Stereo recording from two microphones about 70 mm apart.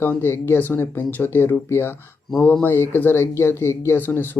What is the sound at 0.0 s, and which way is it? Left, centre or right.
Speech, left.